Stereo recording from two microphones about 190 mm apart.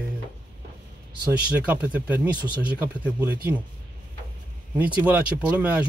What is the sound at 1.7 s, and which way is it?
Speech, 5° right (ahead or behind).